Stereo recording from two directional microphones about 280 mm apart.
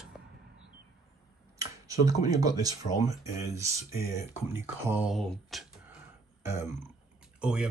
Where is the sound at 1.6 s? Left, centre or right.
Centre.